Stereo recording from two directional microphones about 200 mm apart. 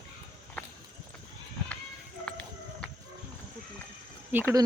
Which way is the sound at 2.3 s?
5° left (ahead or behind).